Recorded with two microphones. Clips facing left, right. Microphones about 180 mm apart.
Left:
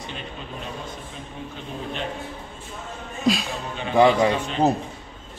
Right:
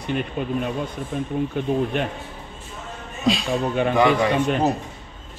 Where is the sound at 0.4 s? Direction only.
55° right (ahead or behind).